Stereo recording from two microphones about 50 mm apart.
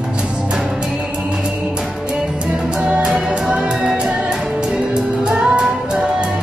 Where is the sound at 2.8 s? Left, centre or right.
Centre.